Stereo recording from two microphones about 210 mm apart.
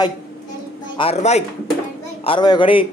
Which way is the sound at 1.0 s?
30° left (ahead or behind).